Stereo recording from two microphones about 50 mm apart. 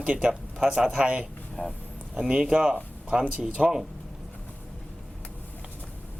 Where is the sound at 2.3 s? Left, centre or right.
Centre.